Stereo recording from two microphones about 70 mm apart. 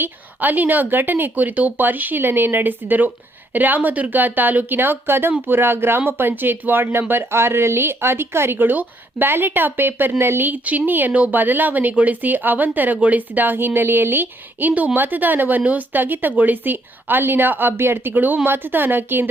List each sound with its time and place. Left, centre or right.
0.0 s speech: right